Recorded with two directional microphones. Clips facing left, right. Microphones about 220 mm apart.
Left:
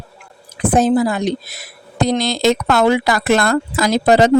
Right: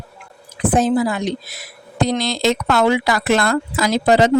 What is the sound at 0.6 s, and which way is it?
A woman's voice, 40° left (ahead or behind).